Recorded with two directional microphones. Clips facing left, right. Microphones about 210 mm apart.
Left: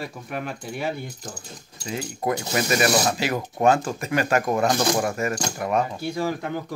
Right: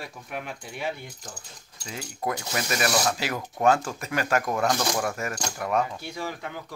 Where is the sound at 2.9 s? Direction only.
20° left (ahead or behind).